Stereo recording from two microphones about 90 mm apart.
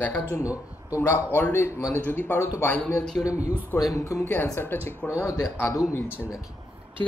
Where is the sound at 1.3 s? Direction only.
20° left (ahead or behind).